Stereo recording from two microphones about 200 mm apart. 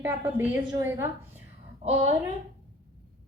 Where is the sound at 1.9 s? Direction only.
35° right (ahead or behind).